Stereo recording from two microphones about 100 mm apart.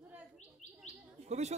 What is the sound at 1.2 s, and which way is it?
Speech, 90° right.